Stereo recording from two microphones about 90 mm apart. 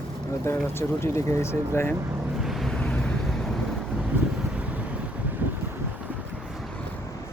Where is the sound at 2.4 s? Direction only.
Centre (ahead or behind).